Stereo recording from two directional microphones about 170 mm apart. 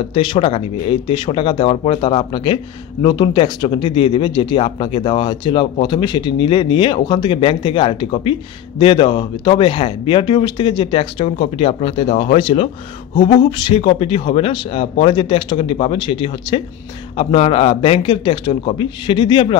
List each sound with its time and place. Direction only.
0.1 s speech: 30° left (ahead or behind)
13.1 s a sound: 50° left (ahead or behind)
13.4 s speech: 25° left (ahead or behind)